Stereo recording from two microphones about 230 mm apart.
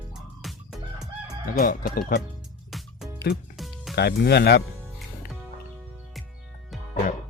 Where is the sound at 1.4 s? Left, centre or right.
Left.